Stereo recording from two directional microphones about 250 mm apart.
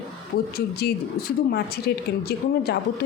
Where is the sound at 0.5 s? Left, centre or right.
Left.